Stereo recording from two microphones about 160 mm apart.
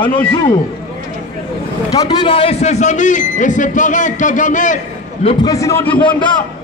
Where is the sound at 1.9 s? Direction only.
25° left (ahead or behind); by 4.8 s 50° left (ahead or behind).